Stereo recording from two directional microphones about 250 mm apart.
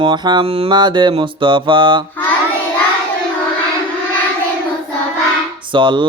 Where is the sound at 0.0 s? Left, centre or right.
Centre.